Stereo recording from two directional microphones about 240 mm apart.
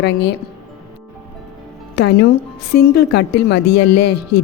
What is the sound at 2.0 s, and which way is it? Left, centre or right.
Speech, left.